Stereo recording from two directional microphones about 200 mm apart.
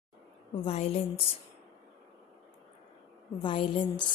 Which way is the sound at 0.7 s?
30° left (ahead or behind).